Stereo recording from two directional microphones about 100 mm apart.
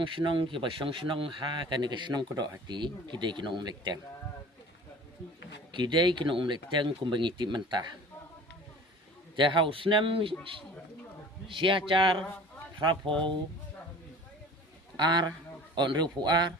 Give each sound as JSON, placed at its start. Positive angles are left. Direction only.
{"t": 0.0, "sound": "speech", "side_deg": -55}
{"t": 5.7, "sound": "speech", "side_deg": -50}
{"t": 9.3, "sound": "speech", "side_deg": -55}
{"t": 11.4, "sound": "speech", "side_deg": -60}
{"t": 14.9, "sound": "a man's voice", "side_deg": -45}